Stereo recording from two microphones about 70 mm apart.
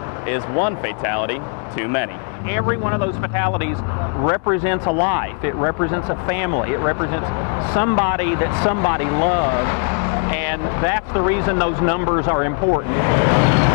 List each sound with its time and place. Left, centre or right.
0.3 s speech: right